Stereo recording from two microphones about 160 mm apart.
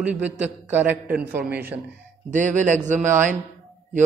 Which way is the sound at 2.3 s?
50° right (ahead or behind).